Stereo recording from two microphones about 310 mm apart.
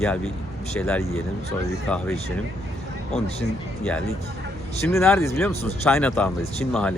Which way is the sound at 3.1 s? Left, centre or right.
Centre.